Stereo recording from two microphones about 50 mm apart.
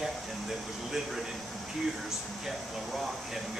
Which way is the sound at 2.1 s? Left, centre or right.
Centre.